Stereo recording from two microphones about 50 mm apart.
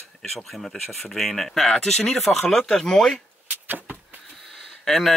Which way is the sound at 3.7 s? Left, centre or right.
Right.